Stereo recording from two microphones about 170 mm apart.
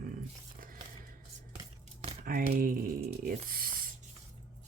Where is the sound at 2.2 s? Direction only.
55° right (ahead or behind).